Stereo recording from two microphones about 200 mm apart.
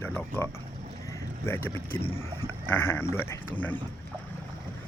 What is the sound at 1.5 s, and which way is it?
Speech, 10° left (ahead or behind).